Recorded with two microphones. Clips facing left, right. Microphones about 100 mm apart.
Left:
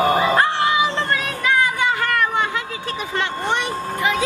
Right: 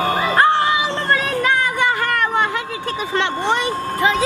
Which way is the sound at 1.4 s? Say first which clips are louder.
Right 1 dB; 45° right (ahead or behind).